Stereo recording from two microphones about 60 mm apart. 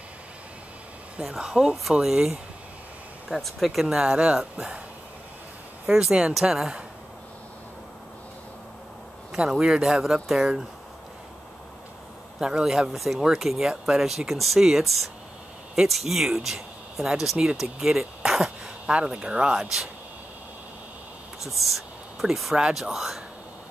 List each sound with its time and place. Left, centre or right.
1.3 s speech: centre
3.3 s speech: centre
3.9 s speech: centre
6.5 s speech: centre
9.3 s speech: centre
12.4 s speech: centre
21.4 s speech: centre